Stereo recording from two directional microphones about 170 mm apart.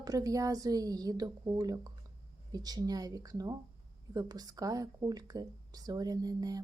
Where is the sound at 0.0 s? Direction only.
20° right (ahead or behind).